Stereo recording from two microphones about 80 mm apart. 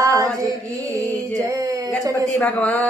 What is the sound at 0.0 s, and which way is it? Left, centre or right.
Mantra, right.